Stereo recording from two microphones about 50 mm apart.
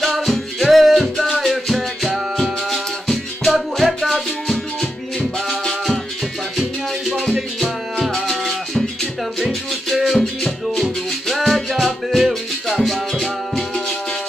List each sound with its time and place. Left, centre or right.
0.3 s music: centre
7.3 s music: centre